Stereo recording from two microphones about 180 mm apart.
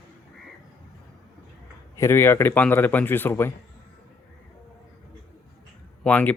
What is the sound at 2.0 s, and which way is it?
A man's voice, 15° left (ahead or behind).